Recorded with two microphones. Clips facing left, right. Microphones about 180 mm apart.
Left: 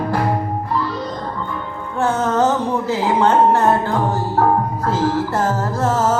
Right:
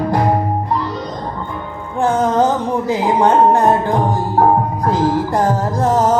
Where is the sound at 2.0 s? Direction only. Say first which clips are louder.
Right 3 dB; 15° right (ahead or behind).